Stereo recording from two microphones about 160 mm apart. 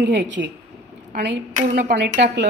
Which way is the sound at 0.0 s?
90° right.